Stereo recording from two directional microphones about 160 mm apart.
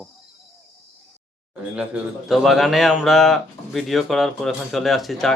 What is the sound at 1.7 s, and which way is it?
A man's voice, 5° right (ahead or behind).